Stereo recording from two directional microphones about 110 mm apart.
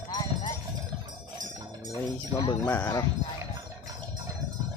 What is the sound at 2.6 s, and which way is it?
Speech, 20° left (ahead or behind).